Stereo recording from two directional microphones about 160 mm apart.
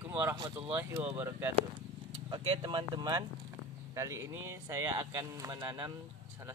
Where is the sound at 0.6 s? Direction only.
10° right (ahead or behind).